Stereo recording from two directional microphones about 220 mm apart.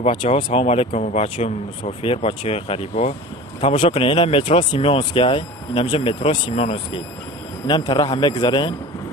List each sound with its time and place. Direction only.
0.0 s speech: 25° left (ahead or behind)
7.7 s speech: 15° left (ahead or behind)